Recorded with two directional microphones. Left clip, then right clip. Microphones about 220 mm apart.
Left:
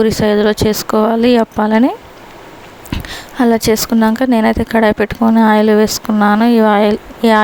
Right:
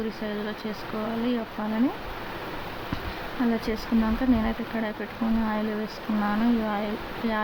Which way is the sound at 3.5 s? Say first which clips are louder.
Left 17 dB; 50° left (ahead or behind).